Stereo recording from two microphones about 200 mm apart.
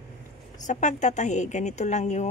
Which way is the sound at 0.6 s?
35° left (ahead or behind).